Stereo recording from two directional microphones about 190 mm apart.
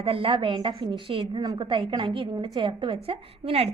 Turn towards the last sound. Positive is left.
turn(degrees=-30)  # may be behind; listen again after turning